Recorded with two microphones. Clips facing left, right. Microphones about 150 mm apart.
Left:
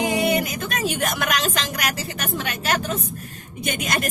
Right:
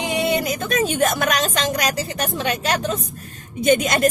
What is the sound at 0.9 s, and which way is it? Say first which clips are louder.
Speech: right 5 dB; 30° right (ahead or behind).